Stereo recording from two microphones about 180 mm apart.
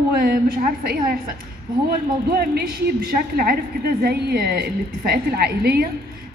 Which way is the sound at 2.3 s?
55° right (ahead or behind).